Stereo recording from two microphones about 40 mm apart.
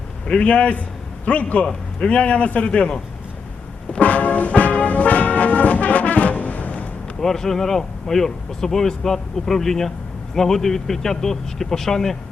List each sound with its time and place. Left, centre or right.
0.3 s a man's voice: left
1.6 s a man's voice: centre
2.1 s a man's voice: left
4.0 s brass instrument: left
7.2 s speech: centre